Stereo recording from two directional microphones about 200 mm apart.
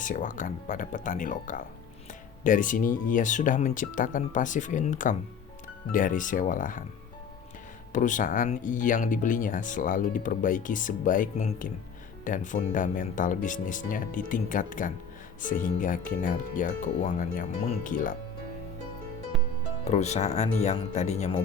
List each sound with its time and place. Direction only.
0.0 s speech: 40° left (ahead or behind)
7.9 s speech: 40° left (ahead or behind)
19.8 s speech: 35° left (ahead or behind)